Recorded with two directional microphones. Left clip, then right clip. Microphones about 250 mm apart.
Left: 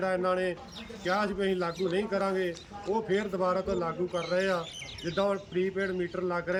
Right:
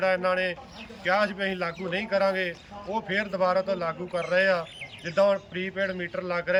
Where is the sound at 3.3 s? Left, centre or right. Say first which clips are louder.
Right 4 dB; centre.